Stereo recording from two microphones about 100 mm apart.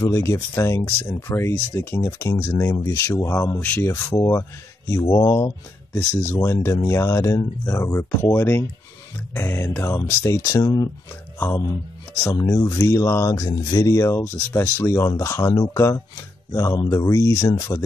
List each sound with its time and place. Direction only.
0.0 s speech: 30° left (ahead or behind)
3.6 s speech: 20° left (ahead or behind)
3.9 s speech: 35° left (ahead or behind)
5.9 s speech: 25° left (ahead or behind)
10.4 s speech: 40° left (ahead or behind)